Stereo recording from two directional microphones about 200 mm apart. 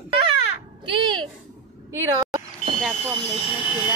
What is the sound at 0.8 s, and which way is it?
Speech, 25° right (ahead or behind).